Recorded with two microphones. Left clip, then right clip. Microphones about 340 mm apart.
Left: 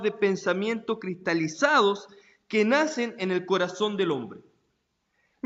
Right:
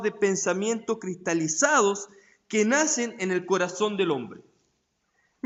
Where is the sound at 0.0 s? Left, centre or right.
Centre.